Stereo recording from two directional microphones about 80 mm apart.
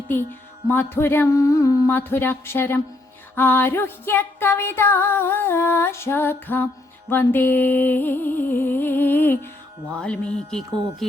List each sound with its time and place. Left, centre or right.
0.1 s music: left
1.4 s a sound: left
1.9 s music: left
9.9 s music: centre